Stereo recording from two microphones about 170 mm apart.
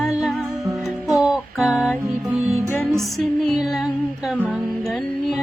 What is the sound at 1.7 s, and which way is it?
Music, 15° left (ahead or behind).